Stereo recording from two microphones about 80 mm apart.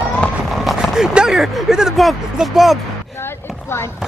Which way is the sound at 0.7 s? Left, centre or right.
Centre.